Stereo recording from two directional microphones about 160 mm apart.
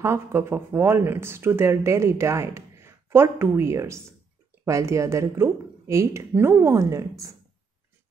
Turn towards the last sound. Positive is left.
turn(degrees=-20)  # may be behind; listen again after turning